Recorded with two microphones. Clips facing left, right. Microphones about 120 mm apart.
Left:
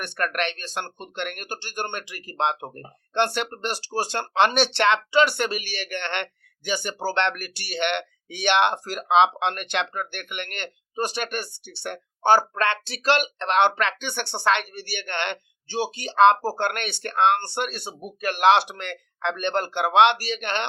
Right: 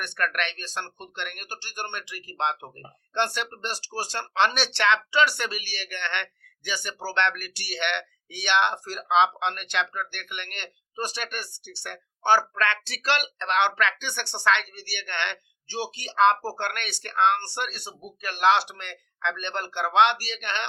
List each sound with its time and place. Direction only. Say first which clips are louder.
0.0 s speech: left 2 dB; 45° left (ahead or behind)